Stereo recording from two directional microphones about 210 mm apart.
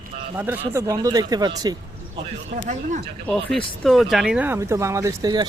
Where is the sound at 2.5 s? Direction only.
35° right (ahead or behind).